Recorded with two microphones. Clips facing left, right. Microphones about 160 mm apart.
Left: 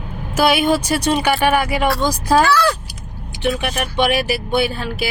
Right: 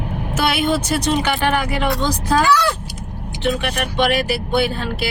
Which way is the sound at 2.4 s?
20° right (ahead or behind).